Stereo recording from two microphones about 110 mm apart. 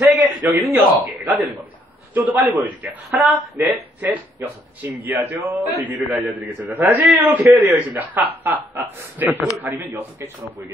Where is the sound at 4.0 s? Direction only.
15° right (ahead or behind).